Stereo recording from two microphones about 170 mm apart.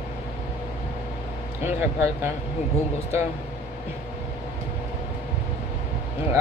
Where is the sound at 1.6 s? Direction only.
15° right (ahead or behind).